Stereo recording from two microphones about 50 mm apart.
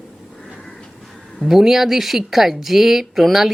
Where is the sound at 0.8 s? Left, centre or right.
Centre.